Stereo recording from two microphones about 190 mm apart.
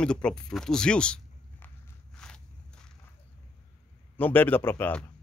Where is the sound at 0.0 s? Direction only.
5° left (ahead or behind).